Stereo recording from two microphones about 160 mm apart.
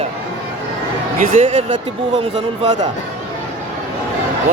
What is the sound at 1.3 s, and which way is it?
Speech, 50° right (ahead or behind).